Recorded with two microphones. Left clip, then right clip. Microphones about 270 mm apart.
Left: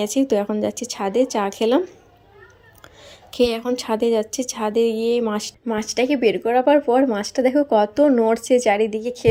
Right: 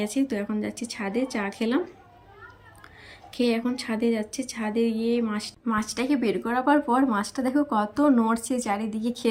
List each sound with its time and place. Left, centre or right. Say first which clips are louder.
0.0 s a woman's voice: left 8 dB; centre
3.3 s a woman's voice: left 6 dB; centre
6.7 s speech: left 6 dB; right
7.1 s a woman's voice: left 7 dB; centre